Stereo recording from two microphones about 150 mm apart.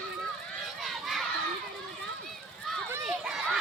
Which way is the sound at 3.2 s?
5° right (ahead or behind).